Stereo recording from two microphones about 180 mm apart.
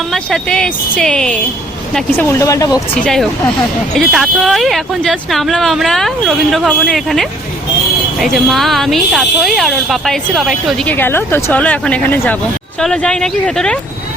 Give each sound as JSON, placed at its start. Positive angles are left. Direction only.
{"t": 0.1, "sound": "speech", "side_deg": 5}
{"t": 2.9, "sound": "speech", "side_deg": 5}